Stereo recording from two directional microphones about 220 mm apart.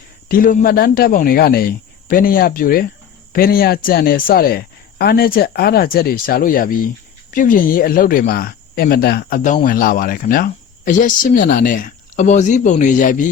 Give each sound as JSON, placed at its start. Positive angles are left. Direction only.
{"t": 0.3, "sound": "speech", "side_deg": 40}